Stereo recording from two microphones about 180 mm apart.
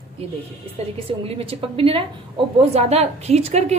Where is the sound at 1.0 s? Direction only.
35° right (ahead or behind).